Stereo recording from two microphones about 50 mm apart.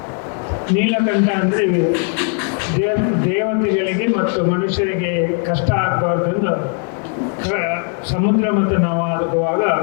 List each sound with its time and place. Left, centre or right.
0.7 s speech: left